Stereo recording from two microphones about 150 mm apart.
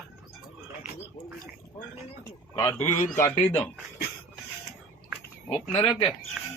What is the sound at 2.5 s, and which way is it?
Speech, 20° left (ahead or behind).